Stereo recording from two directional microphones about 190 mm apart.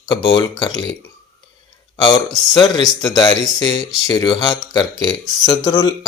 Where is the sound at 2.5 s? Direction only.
20° left (ahead or behind).